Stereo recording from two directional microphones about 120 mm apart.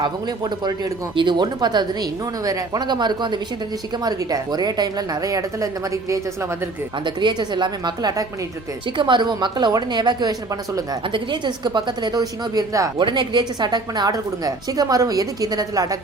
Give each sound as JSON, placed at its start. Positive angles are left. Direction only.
{"t": 0.0, "sound": "a woman's voice", "side_deg": -35}
{"t": 7.0, "sound": "speech", "side_deg": -40}
{"t": 11.0, "sound": "speech", "side_deg": -45}
{"t": 13.0, "sound": "speech", "side_deg": -40}